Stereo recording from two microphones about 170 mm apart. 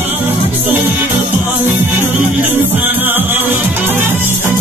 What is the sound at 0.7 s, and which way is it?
Music, 10° right (ahead or behind).